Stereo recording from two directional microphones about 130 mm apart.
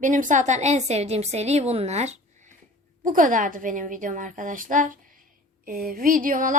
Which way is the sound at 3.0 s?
90° right.